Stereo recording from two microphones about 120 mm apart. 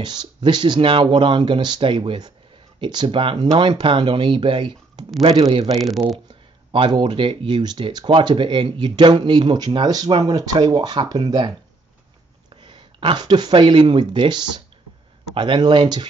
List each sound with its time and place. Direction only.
0.0 s speech: 40° right (ahead or behind)
5.7 s speech: centre (ahead or behind)
6.7 s speech: 45° right (ahead or behind)
12.6 s speech: 40° right (ahead or behind)